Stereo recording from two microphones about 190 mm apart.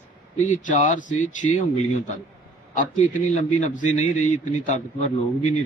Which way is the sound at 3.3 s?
40° left (ahead or behind).